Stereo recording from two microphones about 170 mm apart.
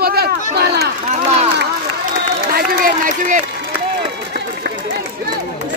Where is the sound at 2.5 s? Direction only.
55° right (ahead or behind).